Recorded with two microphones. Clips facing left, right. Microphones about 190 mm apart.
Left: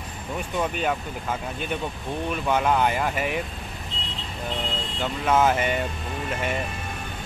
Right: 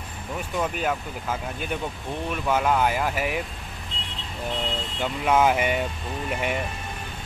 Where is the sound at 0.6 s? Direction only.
5° right (ahead or behind).